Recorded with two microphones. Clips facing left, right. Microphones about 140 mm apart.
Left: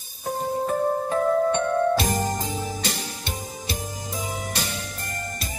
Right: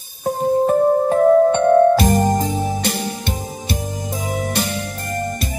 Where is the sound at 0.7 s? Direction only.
45° right (ahead or behind).